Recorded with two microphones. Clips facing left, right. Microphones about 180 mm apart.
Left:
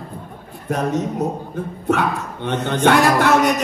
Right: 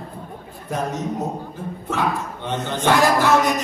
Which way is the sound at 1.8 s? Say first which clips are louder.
Left 4 dB; 65° left (ahead or behind).